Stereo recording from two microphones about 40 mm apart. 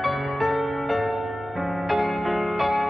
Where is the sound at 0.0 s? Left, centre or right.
Centre.